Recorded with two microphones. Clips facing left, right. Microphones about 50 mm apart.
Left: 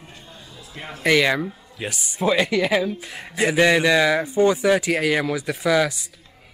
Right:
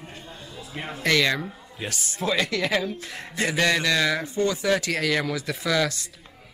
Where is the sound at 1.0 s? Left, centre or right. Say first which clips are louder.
Left 4 dB; centre.